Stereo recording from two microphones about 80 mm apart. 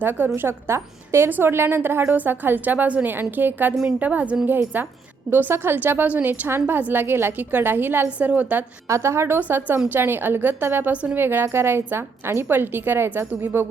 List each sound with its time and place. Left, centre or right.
0.0 s a woman's voice: right
8.9 s a woman's voice: right